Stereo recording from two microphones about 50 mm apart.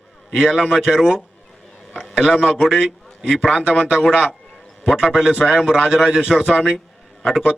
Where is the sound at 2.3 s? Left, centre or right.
Centre.